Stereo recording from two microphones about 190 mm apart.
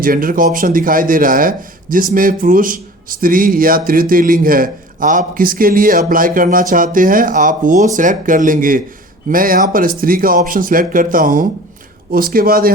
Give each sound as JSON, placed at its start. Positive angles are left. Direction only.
{"t": 0.0, "sound": "speech", "side_deg": -50}